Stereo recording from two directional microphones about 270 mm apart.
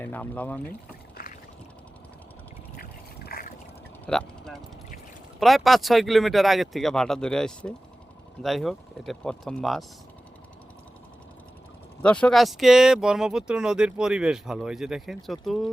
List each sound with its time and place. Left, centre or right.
0.0 s speech: centre
1.2 s boat: left
2.7 s a sound: left
4.0 s speech: centre
12.0 s speech: centre